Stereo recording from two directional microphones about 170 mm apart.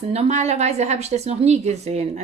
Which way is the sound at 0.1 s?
40° right (ahead or behind).